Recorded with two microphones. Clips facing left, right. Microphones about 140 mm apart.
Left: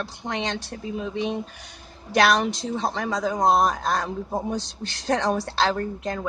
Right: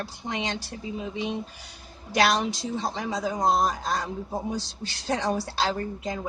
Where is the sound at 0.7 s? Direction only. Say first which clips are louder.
Left 3 dB; 55° left (ahead or behind).